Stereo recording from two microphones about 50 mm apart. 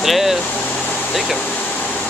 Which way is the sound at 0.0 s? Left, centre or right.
Centre.